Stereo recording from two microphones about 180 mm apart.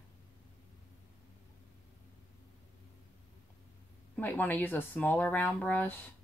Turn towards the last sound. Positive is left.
turn(degrees=10)  # may be behind; listen again after turning